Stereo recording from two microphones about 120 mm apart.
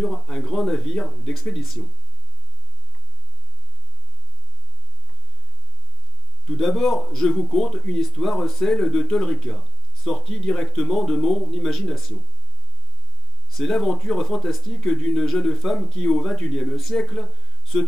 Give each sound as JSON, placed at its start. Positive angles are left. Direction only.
{"t": 0.0, "sound": "speech", "side_deg": 5}
{"t": 6.4, "sound": "speech", "side_deg": 5}
{"t": 13.6, "sound": "speech", "side_deg": 5}